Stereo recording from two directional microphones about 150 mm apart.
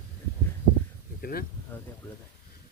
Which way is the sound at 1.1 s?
80° left.